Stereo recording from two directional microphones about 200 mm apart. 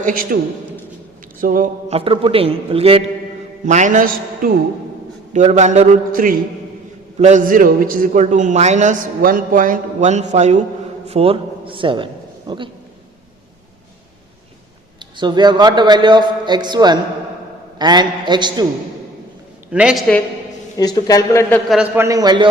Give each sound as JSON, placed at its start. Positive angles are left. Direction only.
{"t": 0.0, "sound": "a man's voice", "side_deg": -45}
{"t": 1.4, "sound": "speech", "side_deg": -40}
{"t": 2.0, "sound": "a man's voice", "side_deg": -25}
{"t": 14.9, "sound": "a man's voice", "side_deg": -20}
{"t": 19.7, "sound": "a woman's voice", "side_deg": -5}
{"t": 20.7, "sound": "speech", "side_deg": 20}
{"t": 21.7, "sound": "a man's voice", "side_deg": -5}